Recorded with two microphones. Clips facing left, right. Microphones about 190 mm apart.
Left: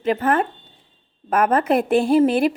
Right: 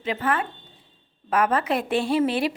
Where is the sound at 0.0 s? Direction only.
50° left (ahead or behind).